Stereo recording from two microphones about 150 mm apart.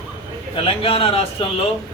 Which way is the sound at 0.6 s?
40° left (ahead or behind).